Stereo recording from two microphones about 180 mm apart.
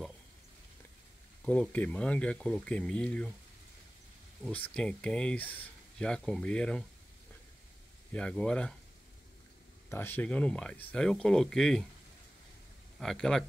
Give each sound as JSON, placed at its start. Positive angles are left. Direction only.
{"t": 1.4, "sound": "speech", "side_deg": 5}
{"t": 4.5, "sound": "speech", "side_deg": 10}
{"t": 8.1, "sound": "speech", "side_deg": 5}
{"t": 9.8, "sound": "speech", "side_deg": 10}
{"t": 13.0, "sound": "speech", "side_deg": 0}